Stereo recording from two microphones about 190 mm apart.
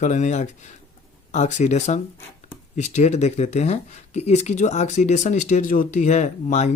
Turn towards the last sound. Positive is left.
turn(degrees=35)  # may be behind; listen again after turning